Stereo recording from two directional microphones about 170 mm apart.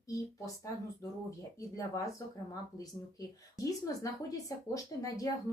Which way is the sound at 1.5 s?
20° left (ahead or behind).